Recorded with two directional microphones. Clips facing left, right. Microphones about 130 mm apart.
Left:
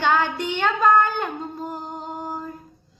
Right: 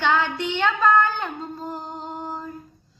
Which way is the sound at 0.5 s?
40° left (ahead or behind).